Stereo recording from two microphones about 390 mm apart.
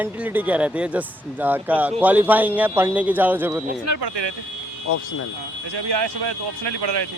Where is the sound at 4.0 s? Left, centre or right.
Right.